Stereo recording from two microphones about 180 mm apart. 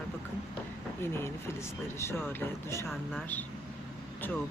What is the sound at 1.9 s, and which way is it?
Speech, 15° left (ahead or behind).